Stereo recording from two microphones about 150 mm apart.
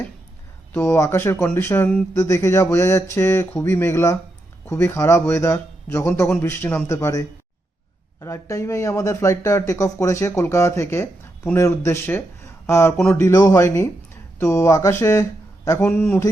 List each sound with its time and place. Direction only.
0.7 s speech: 20° left (ahead or behind)
15.8 s speech: 10° left (ahead or behind)